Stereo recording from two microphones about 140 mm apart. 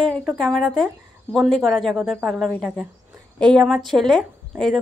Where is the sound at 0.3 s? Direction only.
Centre (ahead or behind).